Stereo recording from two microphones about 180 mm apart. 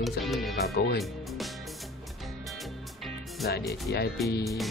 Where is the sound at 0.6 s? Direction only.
60° left (ahead or behind).